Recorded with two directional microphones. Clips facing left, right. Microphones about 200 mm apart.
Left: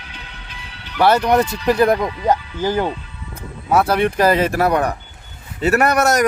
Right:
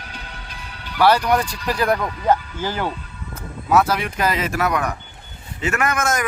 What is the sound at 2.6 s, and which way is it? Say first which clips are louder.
Speech: left 6 dB; 15° left (ahead or behind).